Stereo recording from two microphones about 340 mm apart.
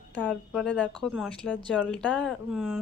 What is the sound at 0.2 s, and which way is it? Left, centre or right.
Speech, centre.